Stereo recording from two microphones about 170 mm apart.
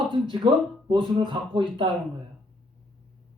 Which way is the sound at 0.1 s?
30° right (ahead or behind).